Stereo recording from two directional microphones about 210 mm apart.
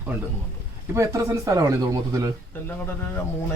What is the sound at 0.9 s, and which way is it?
Speech, 15° right (ahead or behind).